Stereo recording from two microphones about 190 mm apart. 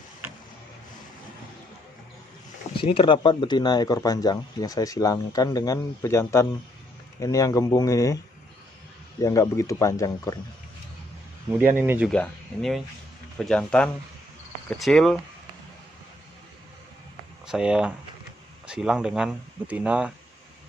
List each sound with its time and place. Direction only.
2.7 s speech: 25° left (ahead or behind)
9.2 s speech: 15° left (ahead or behind)
11.8 s speech: 10° right (ahead or behind)
12.1 s speech: 5° left (ahead or behind)
17.5 s speech: 5° right (ahead or behind)